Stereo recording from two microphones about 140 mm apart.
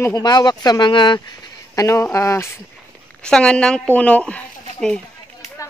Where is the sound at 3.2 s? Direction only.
5° left (ahead or behind).